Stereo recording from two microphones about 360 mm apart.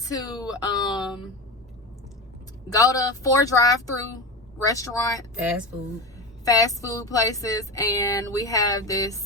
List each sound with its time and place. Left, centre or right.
0.0 s speech: centre
2.7 s speech: centre